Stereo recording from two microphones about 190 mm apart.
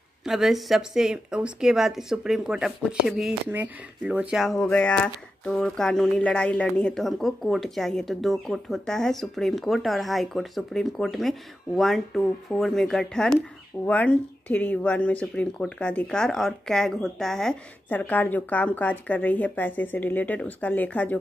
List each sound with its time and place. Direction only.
0.2 s speech: centre (ahead or behind)